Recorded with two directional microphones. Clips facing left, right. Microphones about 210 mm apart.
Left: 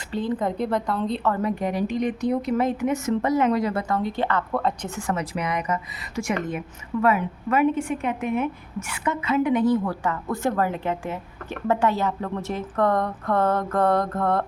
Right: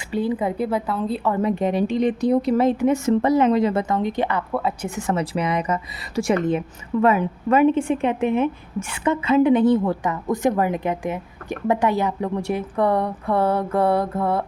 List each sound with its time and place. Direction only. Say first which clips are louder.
0.1 s a woman's voice: right 3 dB; 10° right (ahead or behind)
1.3 s a woman's voice: right 7 dB; 25° right (ahead or behind); by 4.9 s 10° right (ahead or behind)
4.9 s a woman's voice: right 4 dB; 25° right (ahead or behind); by 14.4 s 5° right (ahead or behind)